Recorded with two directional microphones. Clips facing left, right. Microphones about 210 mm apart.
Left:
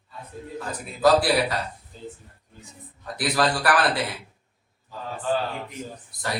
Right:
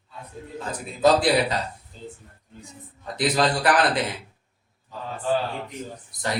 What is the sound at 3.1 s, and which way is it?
Speech, 20° right (ahead or behind).